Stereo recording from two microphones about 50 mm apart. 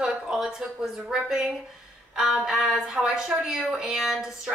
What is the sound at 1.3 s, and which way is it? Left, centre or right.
A woman's voice, centre.